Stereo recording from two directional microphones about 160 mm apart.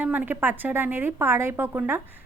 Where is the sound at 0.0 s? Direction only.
10° right (ahead or behind).